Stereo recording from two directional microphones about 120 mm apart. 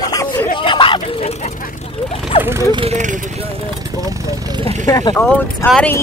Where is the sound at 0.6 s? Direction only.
45° left (ahead or behind).